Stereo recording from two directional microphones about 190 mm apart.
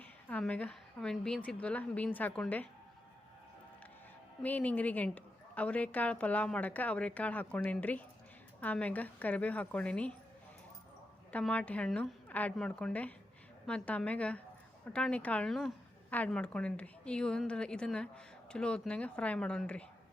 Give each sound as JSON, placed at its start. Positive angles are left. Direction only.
{"t": 0.0, "sound": "a woman's voice", "side_deg": 5}
{"t": 4.4, "sound": "a woman's voice", "side_deg": 10}
{"t": 11.3, "sound": "a woman's voice", "side_deg": 5}